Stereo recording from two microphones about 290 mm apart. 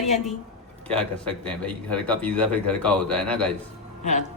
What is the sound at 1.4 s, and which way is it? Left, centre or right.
A man's voice, centre.